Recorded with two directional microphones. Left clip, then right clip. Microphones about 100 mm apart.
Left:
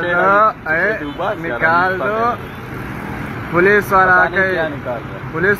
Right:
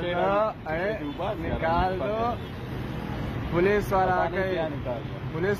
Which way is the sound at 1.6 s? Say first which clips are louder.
Left 11 dB; 25° right (ahead or behind).